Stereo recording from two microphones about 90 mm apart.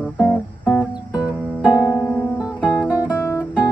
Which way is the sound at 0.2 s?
20° left (ahead or behind).